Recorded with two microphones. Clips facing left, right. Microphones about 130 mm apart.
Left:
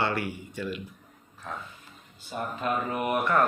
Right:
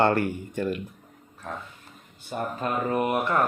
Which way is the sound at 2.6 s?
30° right (ahead or behind).